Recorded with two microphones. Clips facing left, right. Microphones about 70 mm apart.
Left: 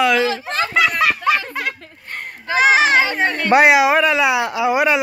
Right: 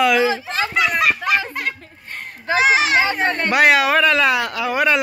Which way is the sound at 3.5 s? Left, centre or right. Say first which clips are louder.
Left 3 dB; left.